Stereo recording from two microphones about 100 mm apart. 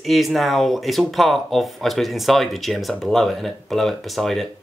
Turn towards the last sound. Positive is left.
turn(degrees=0)  # may be behind; listen again after turning